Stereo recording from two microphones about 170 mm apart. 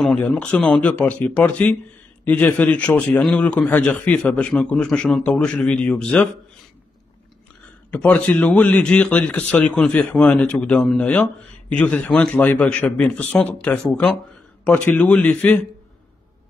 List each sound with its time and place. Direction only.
0.0 s a man's voice: 5° left (ahead or behind)
7.9 s a man's voice: 10° left (ahead or behind)